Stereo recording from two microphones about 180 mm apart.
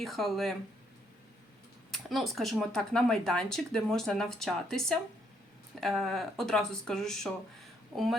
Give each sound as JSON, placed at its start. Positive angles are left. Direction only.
{"t": 0.0, "sound": "speech", "side_deg": 0}
{"t": 1.9, "sound": "speech", "side_deg": 0}
{"t": 7.9, "sound": "speech", "side_deg": -20}